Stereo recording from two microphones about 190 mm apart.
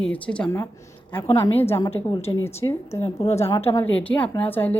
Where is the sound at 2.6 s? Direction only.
20° left (ahead or behind).